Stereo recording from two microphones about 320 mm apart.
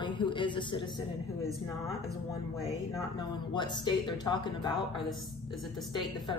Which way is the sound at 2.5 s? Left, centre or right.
Centre.